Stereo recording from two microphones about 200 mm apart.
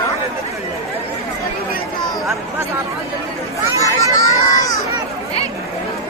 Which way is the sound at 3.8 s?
15° left (ahead or behind).